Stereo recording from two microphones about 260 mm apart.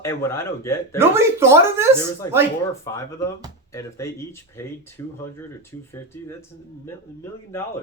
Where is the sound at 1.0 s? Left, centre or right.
Centre.